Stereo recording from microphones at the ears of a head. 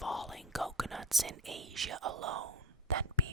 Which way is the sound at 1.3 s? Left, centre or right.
Right.